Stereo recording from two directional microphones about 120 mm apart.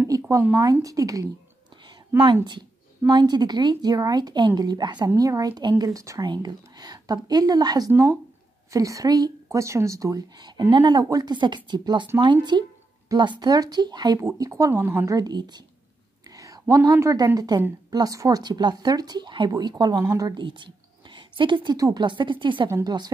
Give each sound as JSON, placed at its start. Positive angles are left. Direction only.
{"t": 0.3, "sound": "a woman's voice", "side_deg": -20}
{"t": 3.1, "sound": "speech", "side_deg": -35}
{"t": 7.9, "sound": "speech", "side_deg": -20}
{"t": 15.1, "sound": "speech", "side_deg": -35}
{"t": 21.7, "sound": "speech", "side_deg": -30}
{"t": 22.0, "sound": "speech", "side_deg": -40}